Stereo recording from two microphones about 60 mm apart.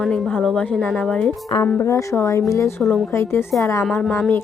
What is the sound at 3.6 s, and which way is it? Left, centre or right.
Speech, left.